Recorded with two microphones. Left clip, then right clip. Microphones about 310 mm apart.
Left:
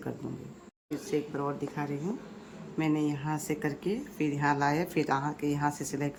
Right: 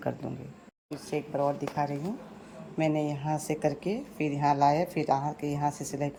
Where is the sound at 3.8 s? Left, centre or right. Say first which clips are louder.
Even; centre.